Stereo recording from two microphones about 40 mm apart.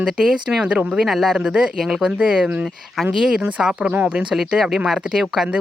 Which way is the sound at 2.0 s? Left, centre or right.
Right.